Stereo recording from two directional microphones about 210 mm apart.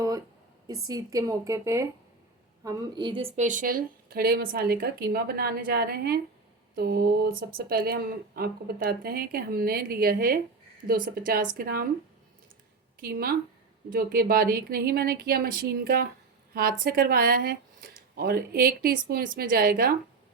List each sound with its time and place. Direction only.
0.9 s a woman's voice: 15° right (ahead or behind); by 11.9 s 45° right (ahead or behind)
13.0 s speech: 45° right (ahead or behind)